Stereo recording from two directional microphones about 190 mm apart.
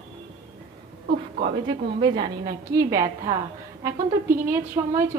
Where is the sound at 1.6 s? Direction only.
20° right (ahead or behind).